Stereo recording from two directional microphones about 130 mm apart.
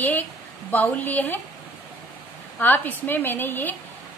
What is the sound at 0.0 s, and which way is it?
A woman's voice, 15° left (ahead or behind).